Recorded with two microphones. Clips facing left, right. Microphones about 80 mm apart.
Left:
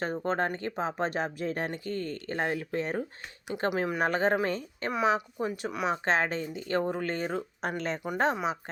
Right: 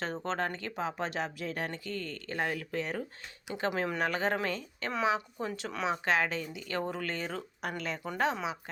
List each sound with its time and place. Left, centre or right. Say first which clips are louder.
0.0 s speech: left 4 dB; centre
6.1 s speech: left 1 dB; left